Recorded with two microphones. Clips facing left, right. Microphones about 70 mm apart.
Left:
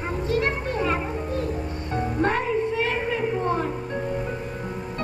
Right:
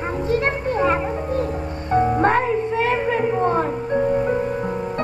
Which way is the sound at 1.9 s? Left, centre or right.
Right.